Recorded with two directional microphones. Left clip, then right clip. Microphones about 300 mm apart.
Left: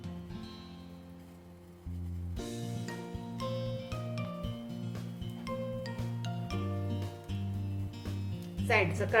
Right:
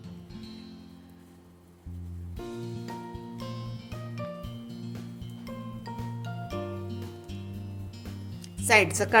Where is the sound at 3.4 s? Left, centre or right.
Centre.